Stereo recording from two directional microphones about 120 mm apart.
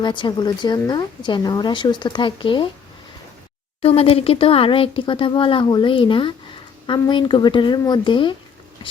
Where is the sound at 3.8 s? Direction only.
50° left (ahead or behind).